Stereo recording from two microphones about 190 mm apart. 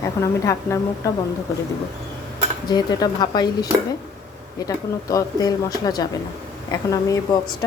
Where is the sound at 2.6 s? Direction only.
20° left (ahead or behind).